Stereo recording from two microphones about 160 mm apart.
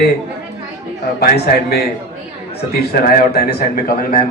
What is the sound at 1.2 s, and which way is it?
Speech, 75° left (ahead or behind).